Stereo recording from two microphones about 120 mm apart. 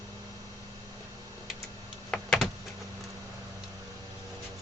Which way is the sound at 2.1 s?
Centre (ahead or behind).